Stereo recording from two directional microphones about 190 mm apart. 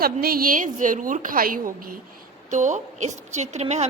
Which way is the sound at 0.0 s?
50° right (ahead or behind).